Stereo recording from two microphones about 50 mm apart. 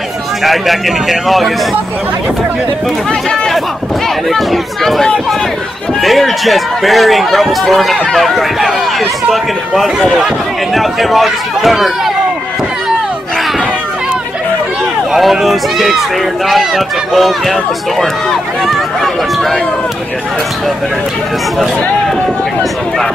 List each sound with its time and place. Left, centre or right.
0.4 s speech: centre
3.1 s speech: centre
4.3 s speech: centre
15.1 s speech: centre